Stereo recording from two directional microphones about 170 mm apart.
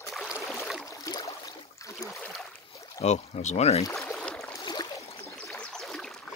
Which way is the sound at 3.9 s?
5° left (ahead or behind).